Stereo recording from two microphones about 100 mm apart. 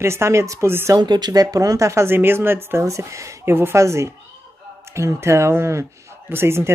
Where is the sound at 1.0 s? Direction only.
45° right (ahead or behind).